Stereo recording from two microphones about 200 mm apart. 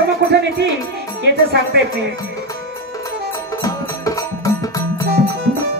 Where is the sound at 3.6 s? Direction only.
15° left (ahead or behind).